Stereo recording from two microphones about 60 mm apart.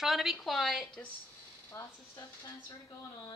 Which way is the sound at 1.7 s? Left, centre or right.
Left.